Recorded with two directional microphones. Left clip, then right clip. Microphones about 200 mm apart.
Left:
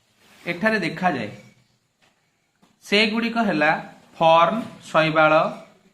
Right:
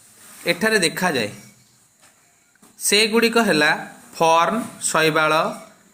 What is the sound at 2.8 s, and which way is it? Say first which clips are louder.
A man's voice: right 4 dB; 25° right (ahead or behind).